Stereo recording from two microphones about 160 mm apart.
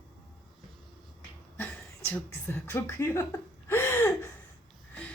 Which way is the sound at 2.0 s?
15° left (ahead or behind).